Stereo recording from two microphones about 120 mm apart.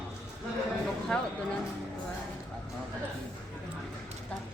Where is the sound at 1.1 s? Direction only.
10° left (ahead or behind).